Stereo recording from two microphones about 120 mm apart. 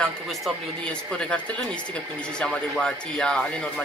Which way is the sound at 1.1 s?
5° left (ahead or behind).